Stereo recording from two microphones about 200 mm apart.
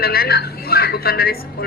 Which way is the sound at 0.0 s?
50° left (ahead or behind).